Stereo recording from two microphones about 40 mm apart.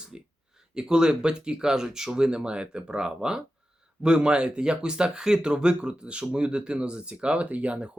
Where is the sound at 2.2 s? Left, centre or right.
Right.